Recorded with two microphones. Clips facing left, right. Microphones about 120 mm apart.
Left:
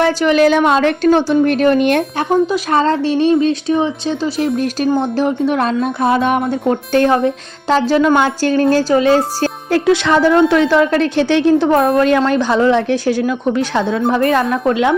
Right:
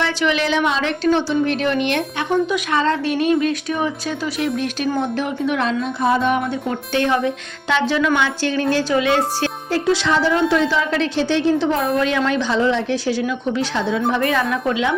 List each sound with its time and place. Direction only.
0.0 s a woman's voice: 40° left (ahead or behind)
6.0 s a woman's voice: 65° left (ahead or behind)
6.4 s a woman's voice: 45° left (ahead or behind)
9.6 s a woman's voice: 60° left (ahead or behind)
14.1 s a woman's voice: 40° left (ahead or behind)